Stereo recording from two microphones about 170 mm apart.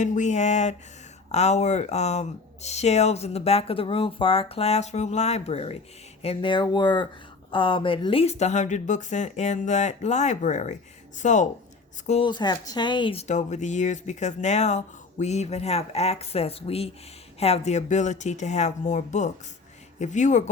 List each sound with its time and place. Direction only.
0.0 s speech: 45° left (ahead or behind)
12.0 s speech: 35° left (ahead or behind)